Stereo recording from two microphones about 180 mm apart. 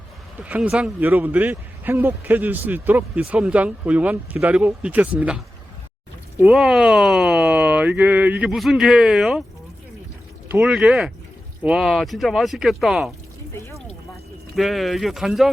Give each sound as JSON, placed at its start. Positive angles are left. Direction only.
{"t": 0.4, "sound": "speech", "side_deg": -5}
{"t": 6.4, "sound": "speech", "side_deg": 0}
{"t": 10.5, "sound": "speech", "side_deg": -5}
{"t": 13.5, "sound": "speech", "side_deg": 15}
{"t": 14.5, "sound": "speech", "side_deg": 0}